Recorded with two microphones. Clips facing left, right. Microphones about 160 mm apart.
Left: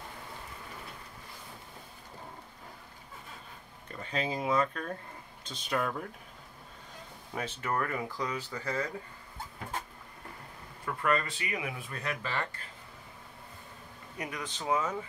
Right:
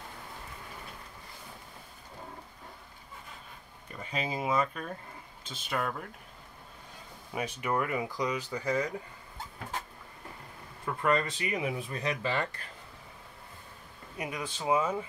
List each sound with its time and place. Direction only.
4.0 s speech: 10° right (ahead or behind)
7.3 s speech: 10° right (ahead or behind)
10.9 s a sound: 20° right (ahead or behind)
11.2 s speech: 20° right (ahead or behind)
14.2 s speech: 10° right (ahead or behind)